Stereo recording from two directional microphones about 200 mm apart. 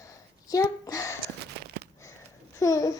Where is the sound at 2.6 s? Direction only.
15° left (ahead or behind).